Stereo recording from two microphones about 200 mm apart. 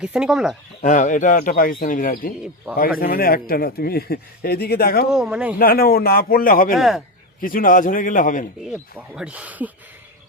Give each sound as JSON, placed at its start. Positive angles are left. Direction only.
{"t": 0.0, "sound": "speech", "side_deg": -5}
{"t": 0.8, "sound": "speech", "side_deg": 40}
{"t": 5.1, "sound": "speech", "side_deg": 0}
{"t": 5.5, "sound": "speech", "side_deg": 50}
{"t": 6.7, "sound": "speech", "side_deg": 0}
{"t": 7.4, "sound": "speech", "side_deg": 45}
{"t": 8.7, "sound": "speech", "side_deg": -5}